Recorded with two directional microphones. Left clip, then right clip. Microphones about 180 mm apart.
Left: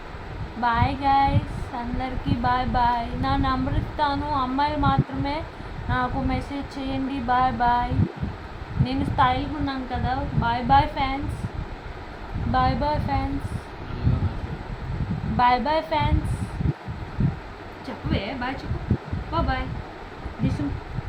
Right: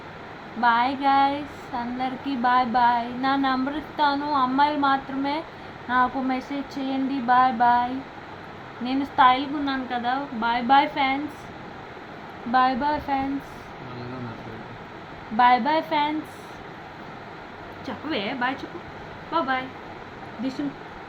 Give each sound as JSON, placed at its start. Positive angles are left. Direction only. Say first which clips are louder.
{"t": 0.6, "sound": "a woman's voice", "louder": "right 2 dB", "side_deg": -15}
{"t": 12.5, "sound": "a woman's voice", "louder": "right 2 dB", "side_deg": -10}
{"t": 15.4, "sound": "a woman's voice", "louder": "right 2 dB", "side_deg": -15}
{"t": 17.8, "sound": "a woman's voice", "louder": "right 1 dB", "side_deg": -20}